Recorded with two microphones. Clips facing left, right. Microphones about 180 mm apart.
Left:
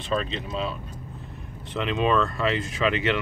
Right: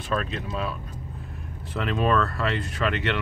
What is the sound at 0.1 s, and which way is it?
Speech, 5° right (ahead or behind).